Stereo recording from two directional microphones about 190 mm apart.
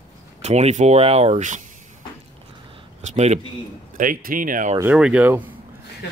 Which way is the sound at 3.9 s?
45° right (ahead or behind).